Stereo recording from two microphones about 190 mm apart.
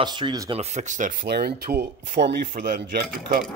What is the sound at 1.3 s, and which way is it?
Speech, 55° right (ahead or behind).